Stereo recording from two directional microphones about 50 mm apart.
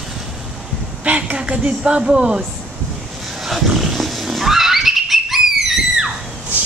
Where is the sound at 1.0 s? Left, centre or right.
Right.